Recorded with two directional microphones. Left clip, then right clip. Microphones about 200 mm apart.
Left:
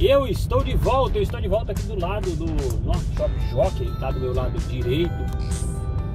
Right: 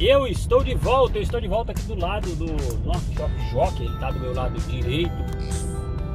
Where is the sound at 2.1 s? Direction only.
Centre (ahead or behind).